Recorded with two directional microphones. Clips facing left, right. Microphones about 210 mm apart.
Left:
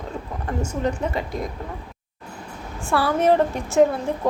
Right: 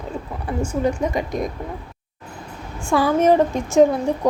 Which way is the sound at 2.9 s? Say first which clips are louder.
Right 3 dB; 15° right (ahead or behind).